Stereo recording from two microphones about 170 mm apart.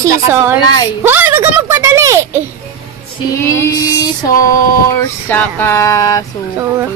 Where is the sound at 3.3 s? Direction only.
15° left (ahead or behind).